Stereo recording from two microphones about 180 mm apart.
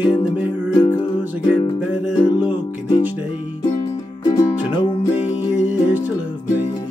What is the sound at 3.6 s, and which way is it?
Music, 20° left (ahead or behind).